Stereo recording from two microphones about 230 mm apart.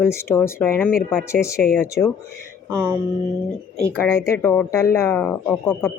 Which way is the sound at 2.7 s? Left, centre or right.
Centre.